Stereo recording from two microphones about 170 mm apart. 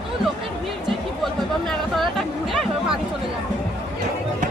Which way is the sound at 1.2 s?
Centre (ahead or behind).